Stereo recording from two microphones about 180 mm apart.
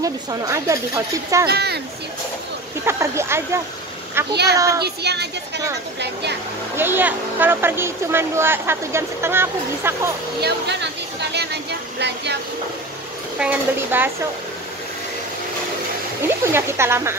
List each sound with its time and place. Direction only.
0.0 s speech: 20° right (ahead or behind)
1.5 s speech: 65° right (ahead or behind)
2.8 s speech: 15° right (ahead or behind)
4.3 s speech: 65° right (ahead or behind)
4.6 s child singing: 20° right (ahead or behind)
4.8 s speech: 70° right (ahead or behind)
6.8 s speech: 10° right (ahead or behind)
10.4 s speech: 70° right (ahead or behind)
13.4 s speech: 10° right (ahead or behind)
16.5 s speech: 15° right (ahead or behind)